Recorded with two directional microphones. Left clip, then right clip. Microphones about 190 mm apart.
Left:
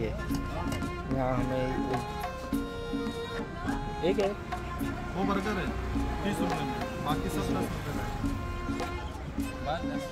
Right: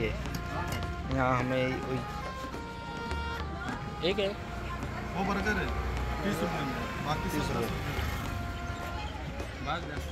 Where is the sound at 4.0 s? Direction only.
45° left (ahead or behind).